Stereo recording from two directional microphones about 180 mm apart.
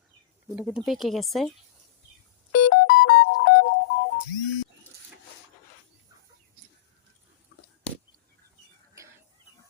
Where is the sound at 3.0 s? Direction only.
65° left (ahead or behind).